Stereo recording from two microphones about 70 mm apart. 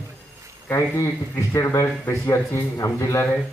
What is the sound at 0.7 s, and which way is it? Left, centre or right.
Speech, left.